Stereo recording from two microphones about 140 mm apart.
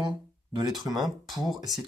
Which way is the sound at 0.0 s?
30° right (ahead or behind).